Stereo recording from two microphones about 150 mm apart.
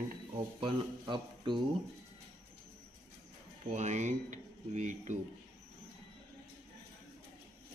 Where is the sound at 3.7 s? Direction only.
50° right (ahead or behind).